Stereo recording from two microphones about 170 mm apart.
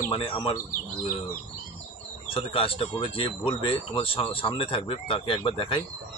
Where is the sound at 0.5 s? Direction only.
55° left (ahead or behind).